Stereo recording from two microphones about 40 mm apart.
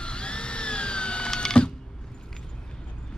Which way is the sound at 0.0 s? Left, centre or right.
Left.